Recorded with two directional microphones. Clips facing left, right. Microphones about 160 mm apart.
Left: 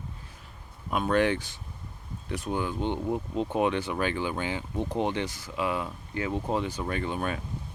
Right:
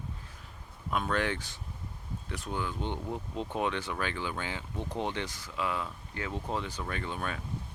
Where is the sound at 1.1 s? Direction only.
15° left (ahead or behind).